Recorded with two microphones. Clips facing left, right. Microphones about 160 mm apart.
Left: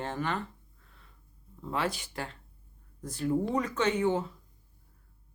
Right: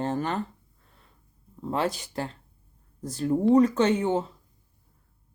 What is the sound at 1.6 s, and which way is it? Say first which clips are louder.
Speech: right 5 dB; 35° right (ahead or behind).